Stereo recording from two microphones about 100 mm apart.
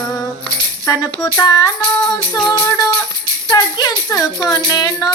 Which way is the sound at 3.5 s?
40° left (ahead or behind).